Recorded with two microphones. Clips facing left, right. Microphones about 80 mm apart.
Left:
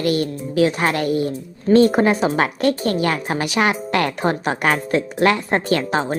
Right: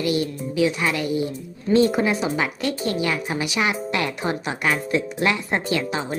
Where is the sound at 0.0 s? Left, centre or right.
Left.